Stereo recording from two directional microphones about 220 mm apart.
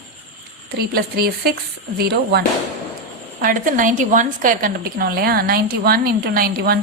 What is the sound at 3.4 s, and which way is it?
A woman's voice, 40° right (ahead or behind).